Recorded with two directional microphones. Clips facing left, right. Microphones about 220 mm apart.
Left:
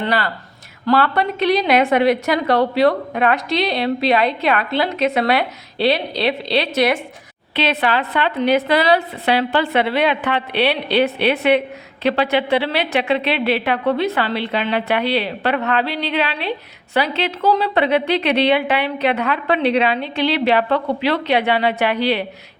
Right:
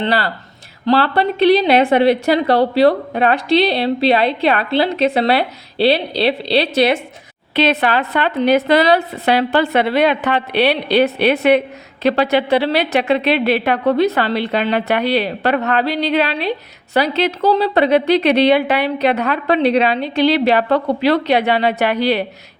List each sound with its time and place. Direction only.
0.0 s a woman's voice: 35° right (ahead or behind)
7.5 s a woman's voice: 45° right (ahead or behind)